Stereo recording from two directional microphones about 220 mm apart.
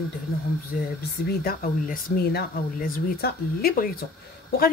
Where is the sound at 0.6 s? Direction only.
45° left (ahead or behind).